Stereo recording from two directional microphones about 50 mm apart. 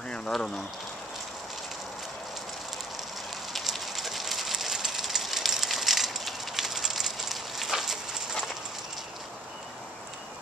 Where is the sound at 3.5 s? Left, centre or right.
Centre.